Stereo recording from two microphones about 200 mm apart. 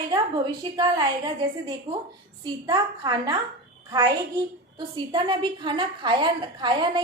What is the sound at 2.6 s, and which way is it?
A woman's voice, 20° right (ahead or behind).